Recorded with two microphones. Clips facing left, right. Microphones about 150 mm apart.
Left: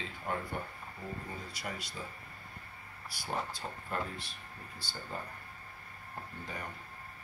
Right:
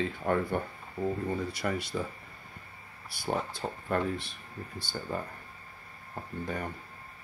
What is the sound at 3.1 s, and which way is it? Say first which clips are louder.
Speech: right 5 dB; 55° right (ahead or behind).